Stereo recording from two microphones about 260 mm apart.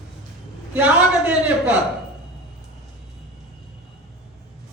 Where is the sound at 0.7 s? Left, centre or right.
Centre.